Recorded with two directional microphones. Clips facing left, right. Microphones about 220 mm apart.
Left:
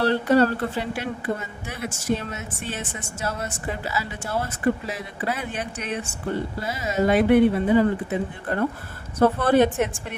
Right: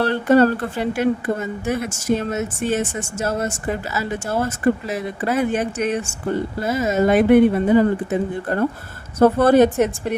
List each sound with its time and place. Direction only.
0.0 s speech: 50° right (ahead or behind)